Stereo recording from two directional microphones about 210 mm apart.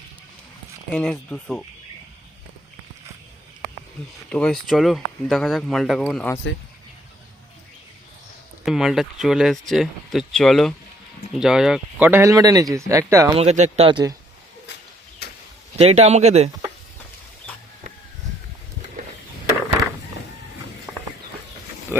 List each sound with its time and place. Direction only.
0.9 s speech: 5° left (ahead or behind)
4.3 s speech: 5° left (ahead or behind)
8.6 s speech: centre (ahead or behind)
13.3 s speech: 30° right (ahead or behind)
15.2 s a sound: 50° left (ahead or behind)
15.8 s speech: 30° right (ahead or behind)